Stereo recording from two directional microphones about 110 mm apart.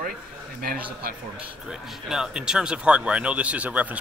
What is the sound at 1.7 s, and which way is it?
Speech, 5° right (ahead or behind).